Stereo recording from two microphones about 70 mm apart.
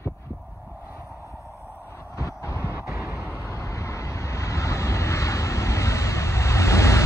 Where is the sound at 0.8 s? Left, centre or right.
Right.